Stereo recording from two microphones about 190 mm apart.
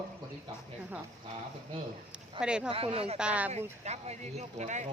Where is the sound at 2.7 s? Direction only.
30° right (ahead or behind).